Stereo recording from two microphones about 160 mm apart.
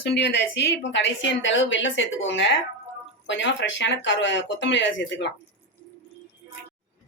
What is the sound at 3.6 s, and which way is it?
Speech, 90° left.